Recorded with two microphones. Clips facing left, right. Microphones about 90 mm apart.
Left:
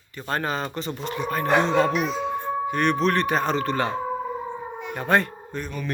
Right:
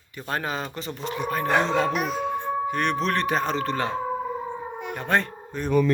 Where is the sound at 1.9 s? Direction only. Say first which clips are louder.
Left 1 dB; 50° right (ahead or behind).